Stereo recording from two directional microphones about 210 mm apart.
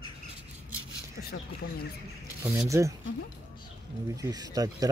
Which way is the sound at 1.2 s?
50° left (ahead or behind).